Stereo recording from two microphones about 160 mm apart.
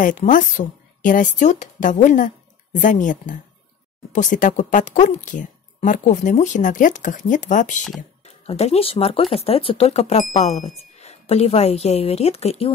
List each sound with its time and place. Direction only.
0.0 s a woman's voice: 55° left (ahead or behind); by 12.7 s 40° left (ahead or behind)